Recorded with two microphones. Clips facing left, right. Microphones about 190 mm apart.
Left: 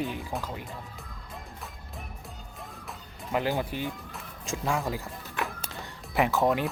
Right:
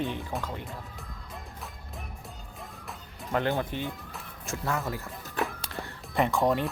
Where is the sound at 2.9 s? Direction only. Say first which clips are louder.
Right 1 dB; 5° left (ahead or behind).